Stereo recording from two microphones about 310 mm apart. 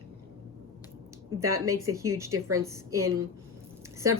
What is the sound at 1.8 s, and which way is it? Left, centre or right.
A woman's voice, centre.